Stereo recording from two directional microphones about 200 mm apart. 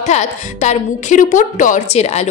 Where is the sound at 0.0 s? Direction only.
35° left (ahead or behind).